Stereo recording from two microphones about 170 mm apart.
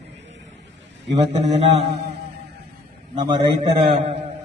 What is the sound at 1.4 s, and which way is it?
Mantra, 40° right (ahead or behind).